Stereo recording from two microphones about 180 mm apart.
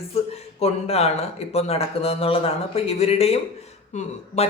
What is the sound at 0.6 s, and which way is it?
Speech, 35° left (ahead or behind).